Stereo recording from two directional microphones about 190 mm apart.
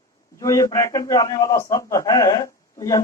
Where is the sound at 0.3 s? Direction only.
15° left (ahead or behind).